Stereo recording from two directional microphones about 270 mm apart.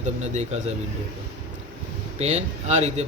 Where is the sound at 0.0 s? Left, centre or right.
Right.